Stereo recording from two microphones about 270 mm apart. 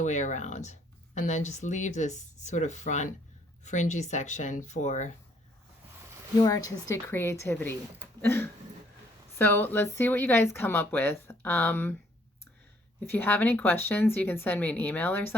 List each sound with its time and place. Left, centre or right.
0.0 s speech: left
6.4 s speech: centre
13.1 s speech: centre